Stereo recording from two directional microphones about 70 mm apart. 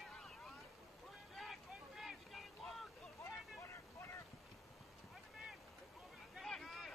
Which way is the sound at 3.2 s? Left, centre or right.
Left.